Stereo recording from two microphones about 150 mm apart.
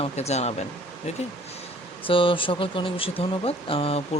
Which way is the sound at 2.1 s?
35° left (ahead or behind).